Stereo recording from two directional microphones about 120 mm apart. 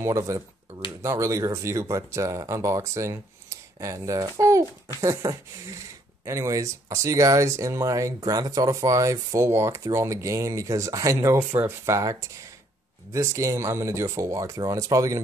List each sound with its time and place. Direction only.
0.0 s speech: 25° right (ahead or behind)